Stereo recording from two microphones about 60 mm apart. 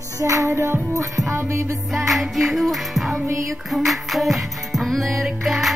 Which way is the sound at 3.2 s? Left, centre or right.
Right.